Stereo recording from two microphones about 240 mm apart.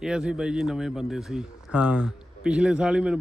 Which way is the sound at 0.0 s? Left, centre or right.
Centre.